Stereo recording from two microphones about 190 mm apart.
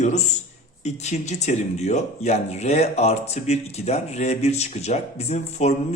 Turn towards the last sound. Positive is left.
turn(degrees=35)  # may be behind; listen again after turning